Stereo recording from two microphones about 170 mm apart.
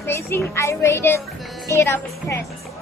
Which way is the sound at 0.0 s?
15° left (ahead or behind).